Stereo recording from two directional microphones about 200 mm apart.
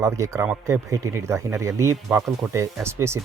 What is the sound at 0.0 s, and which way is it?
Speech, 15° right (ahead or behind).